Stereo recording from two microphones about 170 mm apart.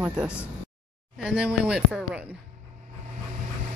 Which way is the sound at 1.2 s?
5° right (ahead or behind).